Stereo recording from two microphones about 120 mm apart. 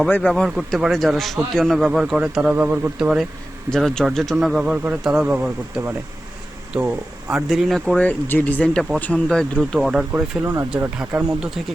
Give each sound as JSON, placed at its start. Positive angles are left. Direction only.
{"t": 0.1, "sound": "speech", "side_deg": 10}
{"t": 0.4, "sound": "a man's voice", "side_deg": -5}
{"t": 7.5, "sound": "speech", "side_deg": 0}
{"t": 9.7, "sound": "a man's voice", "side_deg": -5}
{"t": 10.4, "sound": "speech", "side_deg": -20}